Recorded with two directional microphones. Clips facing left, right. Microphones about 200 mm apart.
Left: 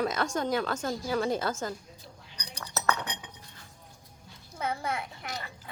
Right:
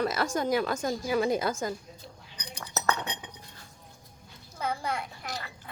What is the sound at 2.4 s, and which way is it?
Chink, 20° right (ahead or behind).